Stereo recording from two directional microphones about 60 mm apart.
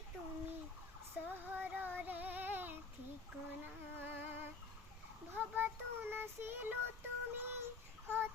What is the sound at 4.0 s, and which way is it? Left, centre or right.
Humming, right.